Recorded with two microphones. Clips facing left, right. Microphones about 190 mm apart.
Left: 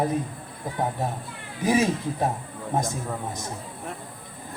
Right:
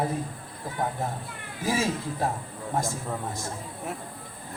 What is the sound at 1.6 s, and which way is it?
A man's voice, 20° left (ahead or behind).